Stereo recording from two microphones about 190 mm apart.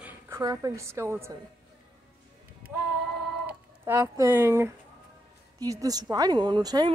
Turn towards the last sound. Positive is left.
turn(degrees=-20)  # may be behind; listen again after turning